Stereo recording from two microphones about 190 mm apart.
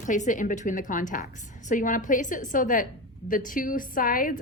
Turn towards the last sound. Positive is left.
turn(degrees=50)  # may be behind; listen again after turning